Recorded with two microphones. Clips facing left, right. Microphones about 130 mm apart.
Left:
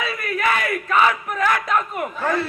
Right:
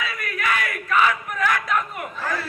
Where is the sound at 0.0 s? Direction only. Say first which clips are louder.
Left 5 dB; 25° left (ahead or behind).